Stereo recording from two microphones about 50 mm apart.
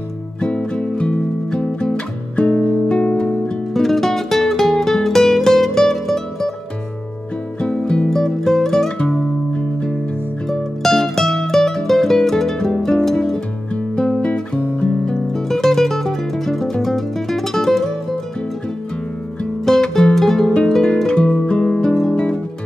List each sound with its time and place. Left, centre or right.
0.4 s music: centre
2.9 s guitar: left
3.7 s music: centre
7.6 s music: centre
8.1 s music: centre
10.5 s music: centre
13.9 s guitar: centre
15.0 s music: centre
19.6 s music: centre
21.0 s music: centre
21.6 s music: centre
22.1 s music: centre